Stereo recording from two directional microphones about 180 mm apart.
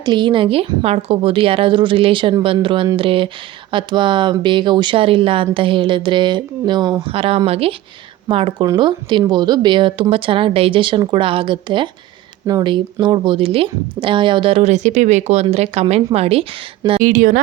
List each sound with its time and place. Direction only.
0.0 s speech: 25° right (ahead or behind)
17.0 s a woman's voice: 50° right (ahead or behind)